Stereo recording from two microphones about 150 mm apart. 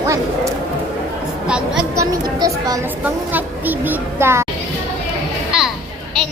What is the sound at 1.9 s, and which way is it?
Speech, 25° right (ahead or behind).